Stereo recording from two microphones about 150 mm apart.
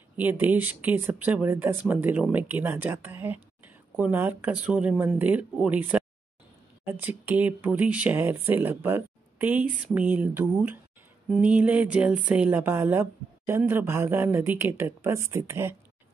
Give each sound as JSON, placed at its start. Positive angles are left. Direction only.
{"t": 0.2, "sound": "speech", "side_deg": -10}